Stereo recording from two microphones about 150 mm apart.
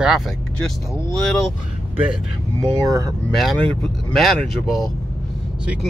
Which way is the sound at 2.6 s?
25° right (ahead or behind).